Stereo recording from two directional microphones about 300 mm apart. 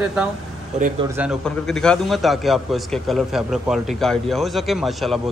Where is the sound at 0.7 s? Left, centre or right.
Right.